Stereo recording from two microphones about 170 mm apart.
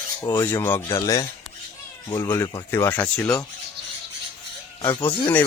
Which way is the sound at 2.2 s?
10° left (ahead or behind).